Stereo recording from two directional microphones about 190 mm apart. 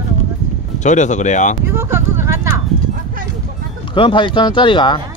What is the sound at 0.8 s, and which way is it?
Speech, 40° left (ahead or behind).